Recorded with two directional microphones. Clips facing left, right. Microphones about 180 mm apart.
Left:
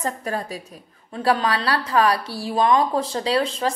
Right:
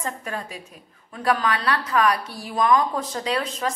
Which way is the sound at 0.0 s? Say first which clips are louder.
Left 4 dB; 35° left (ahead or behind).